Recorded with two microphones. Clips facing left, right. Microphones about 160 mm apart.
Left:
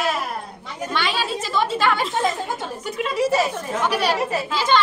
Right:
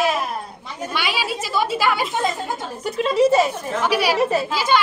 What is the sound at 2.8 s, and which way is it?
Speech, 35° right (ahead or behind).